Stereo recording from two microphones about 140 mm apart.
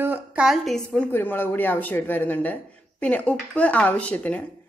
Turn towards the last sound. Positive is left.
turn(degrees=10)  # may be behind; listen again after turning